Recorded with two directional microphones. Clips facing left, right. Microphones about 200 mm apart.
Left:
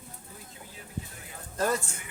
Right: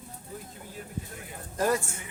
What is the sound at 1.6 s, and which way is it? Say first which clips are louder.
Speech: right 2 dB; 15° right (ahead or behind).